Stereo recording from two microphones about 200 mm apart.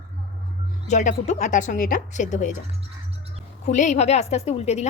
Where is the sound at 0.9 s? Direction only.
35° left (ahead or behind).